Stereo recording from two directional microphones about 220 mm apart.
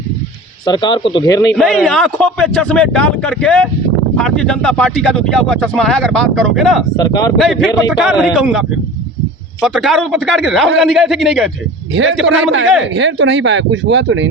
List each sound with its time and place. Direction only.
0.6 s speech: 20° left (ahead or behind)
1.5 s speech: centre (ahead or behind)
6.9 s speech: 15° left (ahead or behind)
7.3 s speech: centre (ahead or behind)
12.8 s speech: 55° right (ahead or behind)